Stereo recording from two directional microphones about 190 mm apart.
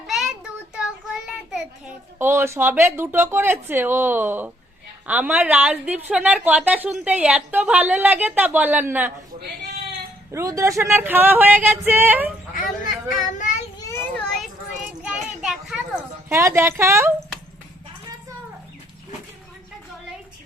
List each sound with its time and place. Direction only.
0.1 s child singing: centre (ahead or behind)
2.1 s a woman's voice: 10° right (ahead or behind)
10.3 s a woman's voice: 15° right (ahead or behind)
13.4 s child singing: 40° left (ahead or behind)
13.7 s children playing: 15° left (ahead or behind)
14.1 s children playing: centre (ahead or behind)
16.3 s a woman's voice: 15° right (ahead or behind)